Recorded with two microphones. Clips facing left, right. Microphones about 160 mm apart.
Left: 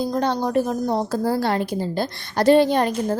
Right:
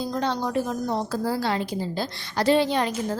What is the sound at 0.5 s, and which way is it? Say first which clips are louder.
A woman's voice: left 5 dB; 45° left (ahead or behind).